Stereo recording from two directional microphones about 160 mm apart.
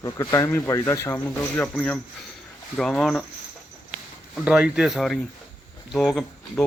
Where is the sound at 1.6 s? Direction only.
5° left (ahead or behind).